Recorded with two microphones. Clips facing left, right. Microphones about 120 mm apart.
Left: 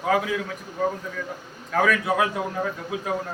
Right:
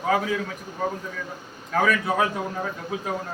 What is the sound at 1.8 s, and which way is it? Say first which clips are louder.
Speech: even; 5° left (ahead or behind).